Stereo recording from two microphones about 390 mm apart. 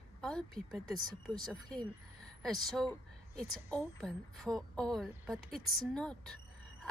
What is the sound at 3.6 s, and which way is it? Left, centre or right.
A woman's voice, centre.